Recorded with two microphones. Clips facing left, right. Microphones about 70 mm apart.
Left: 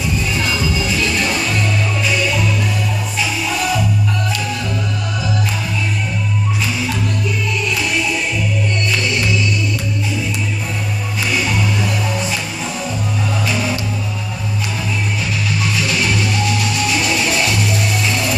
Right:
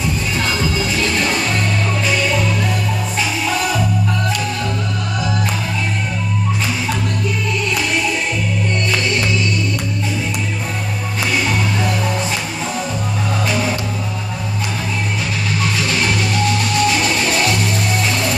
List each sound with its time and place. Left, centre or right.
0.4 s music: right
15.9 s music: right